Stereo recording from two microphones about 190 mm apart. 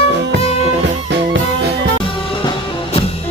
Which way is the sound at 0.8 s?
65° right (ahead or behind).